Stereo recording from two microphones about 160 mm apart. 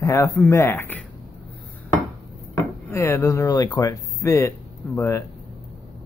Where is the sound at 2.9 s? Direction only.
20° left (ahead or behind).